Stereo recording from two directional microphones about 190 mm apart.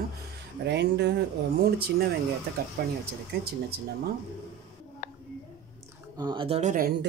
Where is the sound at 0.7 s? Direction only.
65° right (ahead or behind).